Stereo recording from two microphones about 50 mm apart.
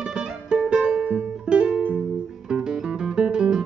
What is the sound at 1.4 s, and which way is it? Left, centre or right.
Music, centre.